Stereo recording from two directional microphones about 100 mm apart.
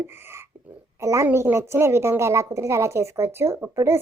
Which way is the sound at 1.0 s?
30° right (ahead or behind).